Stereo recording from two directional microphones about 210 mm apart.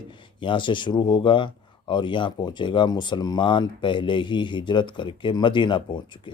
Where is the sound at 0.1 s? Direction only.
25° left (ahead or behind).